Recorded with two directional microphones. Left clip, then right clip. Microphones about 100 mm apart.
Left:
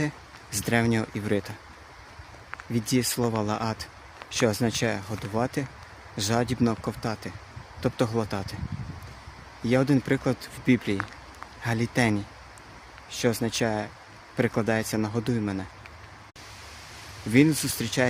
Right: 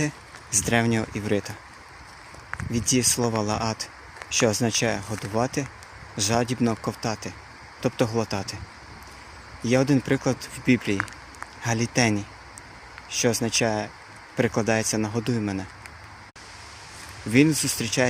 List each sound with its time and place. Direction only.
0.6 s speech: 15° left (ahead or behind)
2.7 s speech: 10° left (ahead or behind)
9.6 s speech: 10° left (ahead or behind)
17.3 s speech: 15° left (ahead or behind)